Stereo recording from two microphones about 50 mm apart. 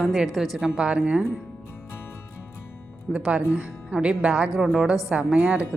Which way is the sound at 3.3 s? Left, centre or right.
Right.